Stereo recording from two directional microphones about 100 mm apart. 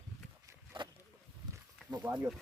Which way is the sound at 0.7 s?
55° right (ahead or behind).